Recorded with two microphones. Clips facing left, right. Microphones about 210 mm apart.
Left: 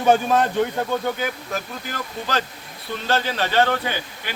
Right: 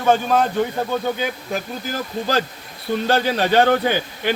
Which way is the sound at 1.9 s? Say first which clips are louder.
Right 5 dB; 35° right (ahead or behind).